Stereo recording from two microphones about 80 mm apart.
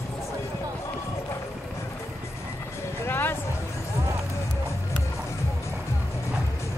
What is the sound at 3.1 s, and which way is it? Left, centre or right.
Music, left.